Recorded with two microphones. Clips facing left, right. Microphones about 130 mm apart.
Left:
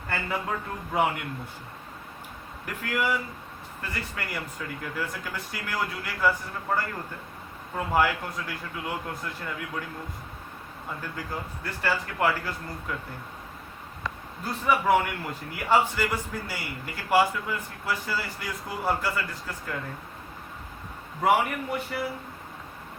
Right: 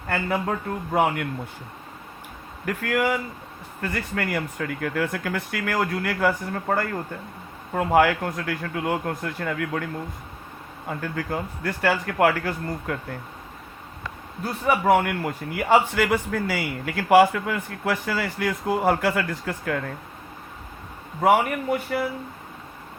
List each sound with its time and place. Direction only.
0.1 s a man's voice: 55° right (ahead or behind)
2.6 s a man's voice: 50° right (ahead or behind)
14.7 s a man's voice: 50° right (ahead or behind); by 19.8 s 70° right (ahead or behind)
21.2 s a man's voice: 50° right (ahead or behind)